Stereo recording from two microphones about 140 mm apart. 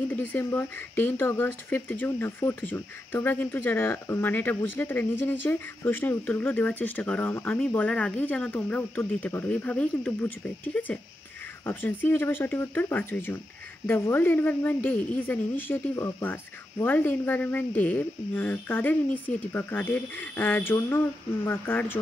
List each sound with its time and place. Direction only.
0.1 s speech: 15° left (ahead or behind)